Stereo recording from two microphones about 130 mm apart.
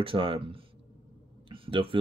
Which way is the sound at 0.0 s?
40° right (ahead or behind).